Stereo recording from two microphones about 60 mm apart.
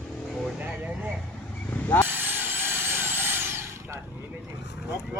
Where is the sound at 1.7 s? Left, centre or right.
Left.